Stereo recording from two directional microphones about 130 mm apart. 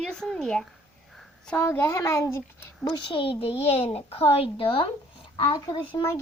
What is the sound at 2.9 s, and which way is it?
A child's voice, 45° left (ahead or behind).